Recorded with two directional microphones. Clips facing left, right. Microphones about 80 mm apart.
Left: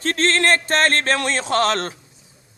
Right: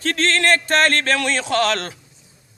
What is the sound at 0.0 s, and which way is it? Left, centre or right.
A man's voice, left.